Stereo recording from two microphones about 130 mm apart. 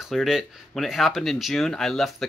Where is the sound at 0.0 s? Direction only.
Centre (ahead or behind).